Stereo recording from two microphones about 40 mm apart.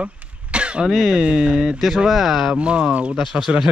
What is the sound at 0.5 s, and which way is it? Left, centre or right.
Throat clearing, right.